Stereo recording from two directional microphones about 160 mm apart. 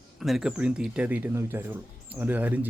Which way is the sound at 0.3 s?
5° right (ahead or behind).